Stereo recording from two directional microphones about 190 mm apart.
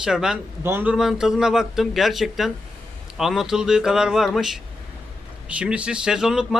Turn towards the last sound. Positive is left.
turn(degrees=-5)  # may be behind; listen again after turning